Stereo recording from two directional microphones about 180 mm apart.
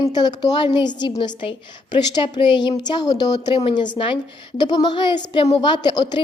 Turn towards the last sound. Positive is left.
turn(degrees=25)  # may be behind; listen again after turning